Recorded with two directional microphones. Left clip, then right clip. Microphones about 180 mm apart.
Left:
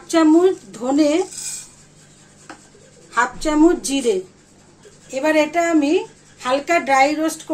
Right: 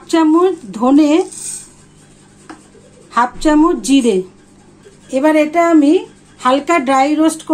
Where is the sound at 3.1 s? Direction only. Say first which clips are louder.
Right 6 dB; 55° right (ahead or behind).